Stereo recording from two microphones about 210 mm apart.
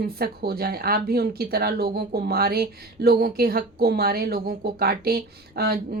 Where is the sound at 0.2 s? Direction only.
45° right (ahead or behind).